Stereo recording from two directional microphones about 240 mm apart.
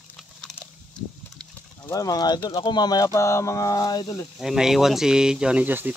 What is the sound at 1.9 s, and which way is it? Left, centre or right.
Speech, centre.